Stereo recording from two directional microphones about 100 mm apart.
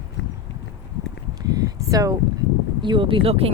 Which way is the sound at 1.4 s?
35° right (ahead or behind).